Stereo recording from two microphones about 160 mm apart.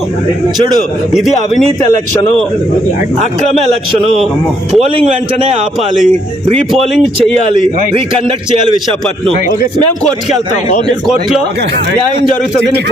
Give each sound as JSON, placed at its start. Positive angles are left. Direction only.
{"t": 5.4, "sound": "a man's voice", "side_deg": -45}
{"t": 10.8, "sound": "speech", "side_deg": 0}